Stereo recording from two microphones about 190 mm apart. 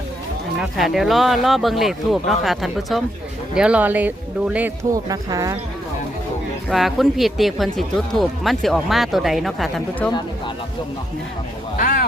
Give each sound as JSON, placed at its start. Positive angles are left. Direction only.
{"t": 0.6, "sound": "speech", "side_deg": 0}
{"t": 6.7, "sound": "speech", "side_deg": 0}
{"t": 10.1, "sound": "a sound", "side_deg": 20}
{"t": 11.8, "sound": "speech", "side_deg": 45}